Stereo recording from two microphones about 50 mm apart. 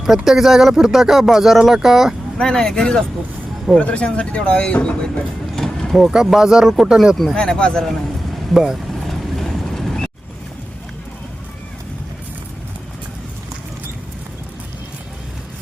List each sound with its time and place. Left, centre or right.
0.0 s speech: centre
2.4 s speech: centre
3.8 s speech: left
5.5 s mechanisms: centre
6.1 s speech: centre
7.3 s speech: centre
9.0 s vehicle: centre